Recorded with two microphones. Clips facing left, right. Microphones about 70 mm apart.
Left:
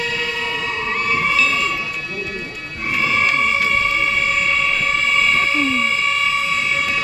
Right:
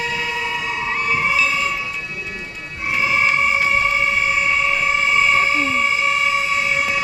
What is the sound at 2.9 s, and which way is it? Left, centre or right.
Music, centre.